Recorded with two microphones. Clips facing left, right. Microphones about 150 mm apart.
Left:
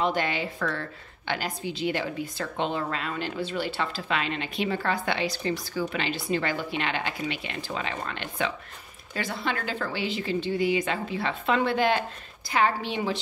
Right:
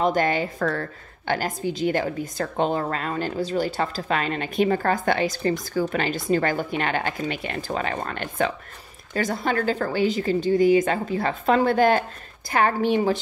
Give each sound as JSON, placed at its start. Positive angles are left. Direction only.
{"t": 0.0, "sound": "a woman's voice", "side_deg": -45}